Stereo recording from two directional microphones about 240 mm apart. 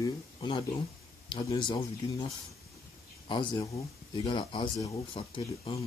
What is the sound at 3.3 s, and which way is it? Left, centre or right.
Speech, centre.